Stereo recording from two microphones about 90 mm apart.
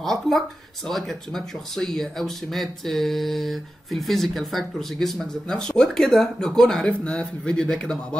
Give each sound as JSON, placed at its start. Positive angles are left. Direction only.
{"t": 0.0, "sound": "speech", "side_deg": 5}